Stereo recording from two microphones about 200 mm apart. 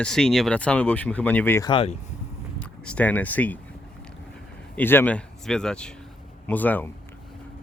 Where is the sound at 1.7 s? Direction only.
25° left (ahead or behind).